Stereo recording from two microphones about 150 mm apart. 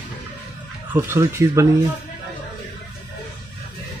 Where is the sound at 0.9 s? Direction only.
15° right (ahead or behind).